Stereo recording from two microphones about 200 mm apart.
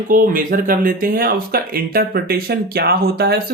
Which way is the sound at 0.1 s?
45° right (ahead or behind).